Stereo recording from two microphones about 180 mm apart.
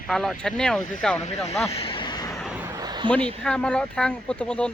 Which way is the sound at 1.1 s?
40° left (ahead or behind).